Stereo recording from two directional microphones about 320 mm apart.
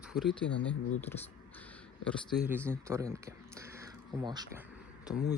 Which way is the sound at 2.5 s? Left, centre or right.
Centre.